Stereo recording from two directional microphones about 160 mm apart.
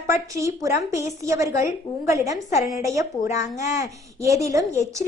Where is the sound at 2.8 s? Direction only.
20° right (ahead or behind).